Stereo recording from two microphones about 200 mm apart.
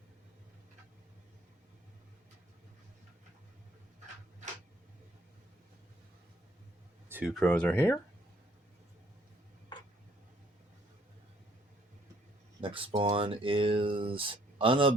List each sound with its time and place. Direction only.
7.1 s speech: 5° right (ahead or behind)
12.6 s a sound: 25° right (ahead or behind)
13.0 s speech: 25° right (ahead or behind)